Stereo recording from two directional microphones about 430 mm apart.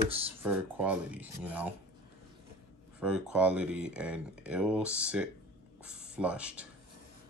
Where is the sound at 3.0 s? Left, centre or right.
Centre.